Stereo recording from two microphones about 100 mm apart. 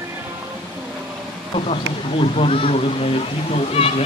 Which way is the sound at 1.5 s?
80° left.